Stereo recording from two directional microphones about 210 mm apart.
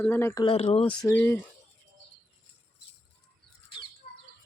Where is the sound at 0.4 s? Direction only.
30° left (ahead or behind).